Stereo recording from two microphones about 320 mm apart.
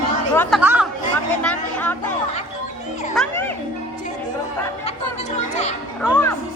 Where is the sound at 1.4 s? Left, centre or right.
Centre.